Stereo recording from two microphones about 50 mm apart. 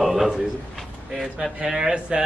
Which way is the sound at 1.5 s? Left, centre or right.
Centre.